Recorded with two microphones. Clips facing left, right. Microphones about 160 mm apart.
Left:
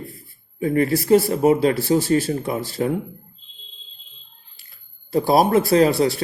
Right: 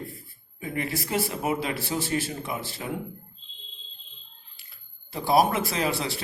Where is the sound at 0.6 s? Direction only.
40° left (ahead or behind).